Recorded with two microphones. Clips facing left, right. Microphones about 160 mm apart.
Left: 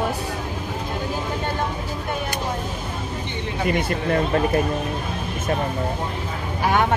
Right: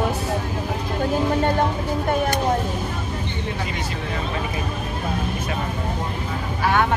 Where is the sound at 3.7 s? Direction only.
55° left (ahead or behind).